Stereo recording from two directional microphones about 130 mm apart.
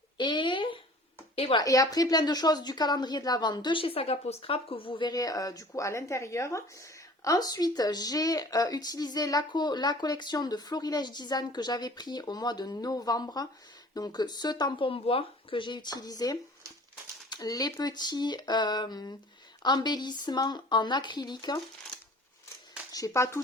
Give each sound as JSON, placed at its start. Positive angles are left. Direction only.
{"t": 0.2, "sound": "a sound", "side_deg": 40}
{"t": 1.4, "sound": "speech", "side_deg": 50}
{"t": 1.6, "sound": "speech", "side_deg": 25}
{"t": 22.9, "sound": "speech", "side_deg": 25}